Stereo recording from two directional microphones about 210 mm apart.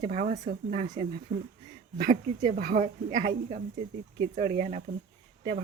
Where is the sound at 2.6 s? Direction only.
40° right (ahead or behind).